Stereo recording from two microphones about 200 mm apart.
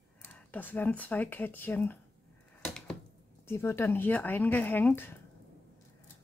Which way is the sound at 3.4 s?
10° left (ahead or behind).